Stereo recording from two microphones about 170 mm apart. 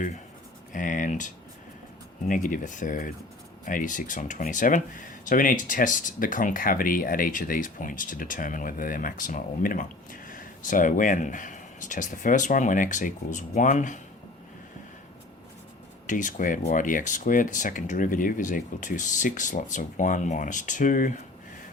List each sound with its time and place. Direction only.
0.7 s speech: 50° left (ahead or behind)
16.0 s speech: 50° left (ahead or behind)